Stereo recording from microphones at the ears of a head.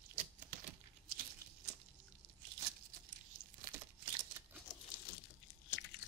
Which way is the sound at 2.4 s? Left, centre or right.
Right.